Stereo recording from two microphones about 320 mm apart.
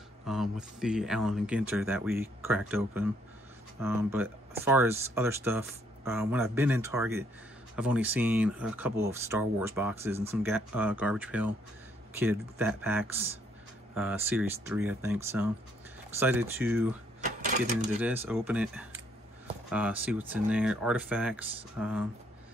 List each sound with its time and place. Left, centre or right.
0.3 s speech: centre
18.0 s speech: centre